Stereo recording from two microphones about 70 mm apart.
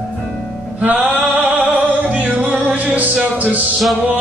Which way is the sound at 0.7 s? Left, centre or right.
Right.